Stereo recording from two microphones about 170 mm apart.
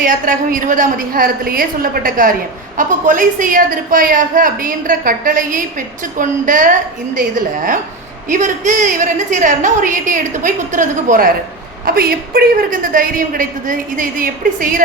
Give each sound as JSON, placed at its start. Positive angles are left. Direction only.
{"t": 0.0, "sound": "a woman's voice", "side_deg": -50}
{"t": 11.9, "sound": "a woman's voice", "side_deg": -60}